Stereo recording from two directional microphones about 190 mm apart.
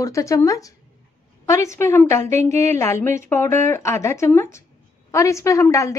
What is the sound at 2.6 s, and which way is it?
A woman's voice, 15° left (ahead or behind).